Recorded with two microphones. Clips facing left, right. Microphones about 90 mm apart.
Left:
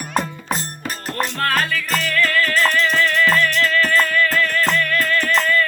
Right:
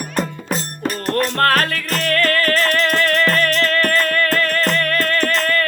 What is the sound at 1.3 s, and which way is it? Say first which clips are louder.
Music: right 3 dB; 55° right (ahead or behind).